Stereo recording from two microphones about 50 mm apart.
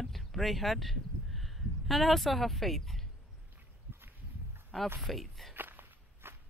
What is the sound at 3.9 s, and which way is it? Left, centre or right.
Walk, right.